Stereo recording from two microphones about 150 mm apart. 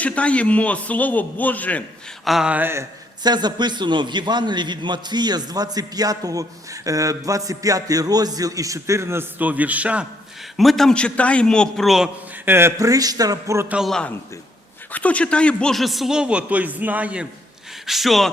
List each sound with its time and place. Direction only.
0.0 s a man's voice: 10° left (ahead or behind)
2.2 s speech: 5° right (ahead or behind)
3.2 s a man's voice: 30° right (ahead or behind); by 10.1 s 10° right (ahead or behind)
10.6 s a man's voice: centre (ahead or behind)
12.5 s a man's voice: 15° right (ahead or behind)
13.7 s a man's voice: centre (ahead or behind)